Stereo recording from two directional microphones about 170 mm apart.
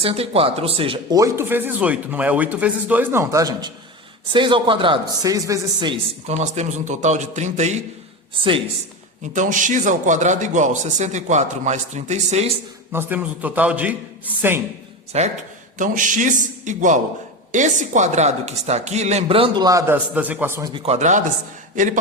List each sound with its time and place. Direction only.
0.0 s a woman's voice: 35° right (ahead or behind)
1.1 s speech: 15° right (ahead or behind)
6.2 s a man's voice: 40° right (ahead or behind)
8.4 s a woman's voice: 30° right (ahead or behind)
9.2 s a man's voice: 45° right (ahead or behind)
12.9 s speech: 10° right (ahead or behind)
15.1 s a woman's voice: 40° right (ahead or behind); by 20.0 s 20° right (ahead or behind)
20.1 s speech: 10° right (ahead or behind)
20.7 s a woman's voice: 35° right (ahead or behind)